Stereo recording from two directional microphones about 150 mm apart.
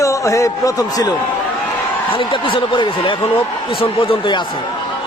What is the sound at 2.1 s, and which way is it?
Speech, 35° left (ahead or behind).